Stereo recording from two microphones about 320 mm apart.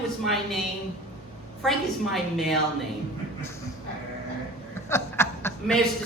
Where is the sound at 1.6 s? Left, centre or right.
Centre.